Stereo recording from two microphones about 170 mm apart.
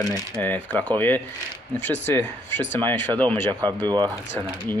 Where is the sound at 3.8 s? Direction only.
25° right (ahead or behind).